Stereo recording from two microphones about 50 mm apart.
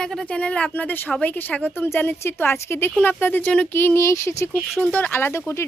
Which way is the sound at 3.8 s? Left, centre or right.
Left.